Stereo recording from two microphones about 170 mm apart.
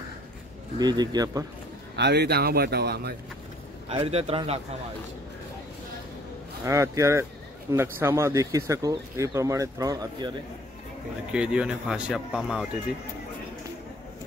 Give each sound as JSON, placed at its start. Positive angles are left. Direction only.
{"t": 0.7, "sound": "speech", "side_deg": -25}
{"t": 2.0, "sound": "speech", "side_deg": -80}
{"t": 3.9, "sound": "a man's voice", "side_deg": -35}
{"t": 6.6, "sound": "speech", "side_deg": -15}
{"t": 11.3, "sound": "speech", "side_deg": -5}